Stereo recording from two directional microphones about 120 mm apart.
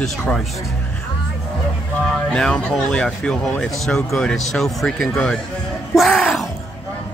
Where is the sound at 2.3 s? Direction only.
5° left (ahead or behind).